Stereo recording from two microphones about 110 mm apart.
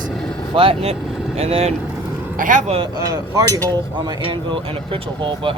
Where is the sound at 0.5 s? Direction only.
55° right (ahead or behind); by 2.8 s 70° right (ahead or behind).